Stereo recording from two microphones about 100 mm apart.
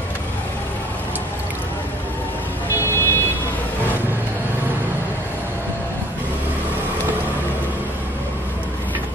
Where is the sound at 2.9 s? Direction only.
25° left (ahead or behind).